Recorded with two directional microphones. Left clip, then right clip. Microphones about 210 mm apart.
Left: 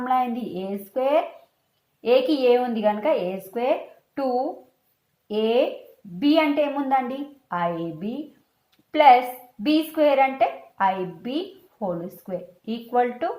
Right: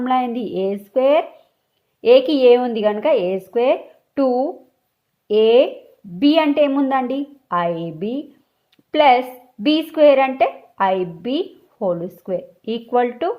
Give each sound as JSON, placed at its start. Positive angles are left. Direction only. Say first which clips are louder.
{"t": 0.0, "sound": "a woman's voice", "louder": "right 4 dB", "side_deg": -50}
{"t": 8.7, "sound": "a sound", "louder": "right 1 dB", "side_deg": -50}
{"t": 9.6, "sound": "a woman's voice", "louder": "right 7 dB", "side_deg": -45}